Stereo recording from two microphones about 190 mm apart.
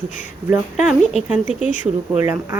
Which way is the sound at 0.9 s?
5° right (ahead or behind).